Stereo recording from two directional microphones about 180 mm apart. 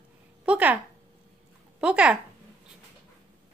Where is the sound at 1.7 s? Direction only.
5° right (ahead or behind).